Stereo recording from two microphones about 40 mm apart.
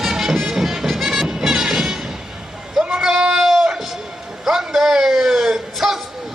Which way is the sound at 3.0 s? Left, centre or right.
Centre.